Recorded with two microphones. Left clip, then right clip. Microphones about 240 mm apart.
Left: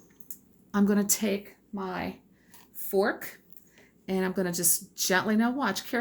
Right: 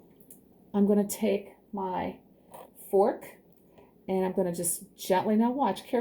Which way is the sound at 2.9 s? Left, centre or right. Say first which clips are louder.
Right 2 dB; left.